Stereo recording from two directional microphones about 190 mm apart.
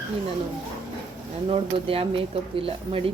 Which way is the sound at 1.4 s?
30° right (ahead or behind).